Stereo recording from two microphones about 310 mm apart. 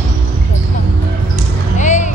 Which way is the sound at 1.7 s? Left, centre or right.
Left.